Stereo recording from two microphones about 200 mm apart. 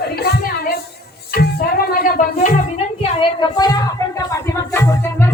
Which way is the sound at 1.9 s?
45° left (ahead or behind).